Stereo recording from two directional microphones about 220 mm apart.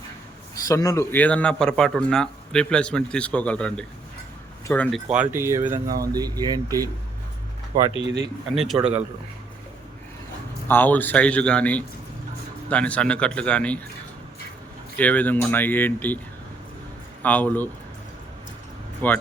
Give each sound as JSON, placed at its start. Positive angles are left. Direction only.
{"t": 0.7, "sound": "a man's voice", "side_deg": 15}
{"t": 7.9, "sound": "speech", "side_deg": -55}
{"t": 8.5, "sound": "a man's voice", "side_deg": 0}
{"t": 10.7, "sound": "a man's voice", "side_deg": 10}
{"t": 14.9, "sound": "speech", "side_deg": 5}
{"t": 17.2, "sound": "speech", "side_deg": 10}
{"t": 19.0, "sound": "speech", "side_deg": 10}